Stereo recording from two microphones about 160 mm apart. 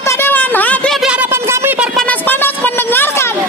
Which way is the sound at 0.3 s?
10° left (ahead or behind).